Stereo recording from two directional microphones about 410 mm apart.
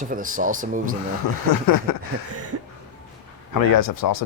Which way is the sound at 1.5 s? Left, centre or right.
Left.